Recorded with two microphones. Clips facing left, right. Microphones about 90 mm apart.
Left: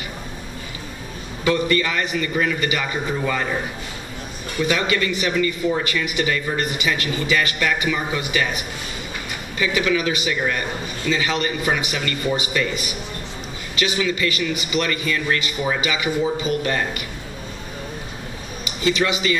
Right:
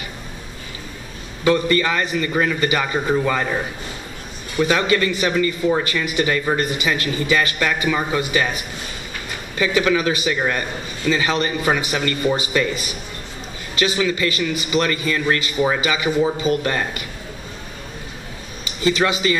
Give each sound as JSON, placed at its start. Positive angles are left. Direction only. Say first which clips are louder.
{"t": 1.4, "sound": "a man's voice", "louder": "right 2 dB", "side_deg": -35}
{"t": 4.6, "sound": "a man's voice", "louder": "right 2 dB", "side_deg": -30}
{"t": 9.6, "sound": "a man's voice", "louder": "right 3 dB", "side_deg": -30}
{"t": 18.6, "sound": "speech", "louder": "right 2 dB", "side_deg": -30}